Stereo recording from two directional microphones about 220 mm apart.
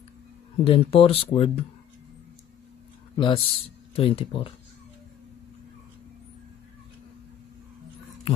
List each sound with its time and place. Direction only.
0.7 s speech: 25° left (ahead or behind)
3.2 s speech: 20° left (ahead or behind)